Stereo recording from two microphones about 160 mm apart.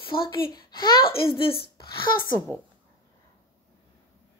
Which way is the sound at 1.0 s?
75° left (ahead or behind).